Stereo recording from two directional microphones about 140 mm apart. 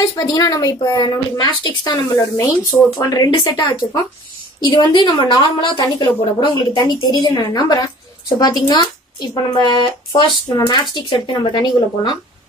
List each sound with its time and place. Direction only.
0.0 s a woman's voice: 25° left (ahead or behind)